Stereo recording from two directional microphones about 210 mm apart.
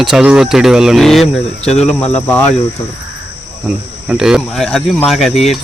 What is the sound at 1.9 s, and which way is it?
Speech, 5° left (ahead or behind).